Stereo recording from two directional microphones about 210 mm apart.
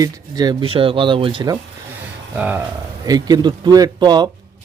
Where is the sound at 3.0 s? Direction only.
20° right (ahead or behind).